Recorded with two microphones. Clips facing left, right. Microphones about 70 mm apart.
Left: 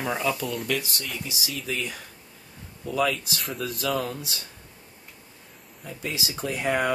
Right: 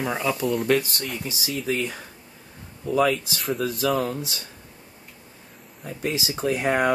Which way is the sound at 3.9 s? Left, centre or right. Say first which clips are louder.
Right 4 dB; right.